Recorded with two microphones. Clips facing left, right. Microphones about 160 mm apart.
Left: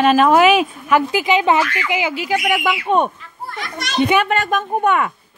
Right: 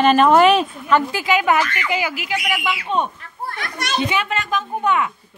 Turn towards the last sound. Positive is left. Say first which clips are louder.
# left 3 dB
turn(degrees=55)  # may be behind; listen again after turning